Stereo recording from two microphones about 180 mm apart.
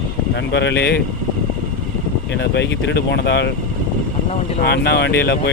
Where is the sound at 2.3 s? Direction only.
75° left (ahead or behind).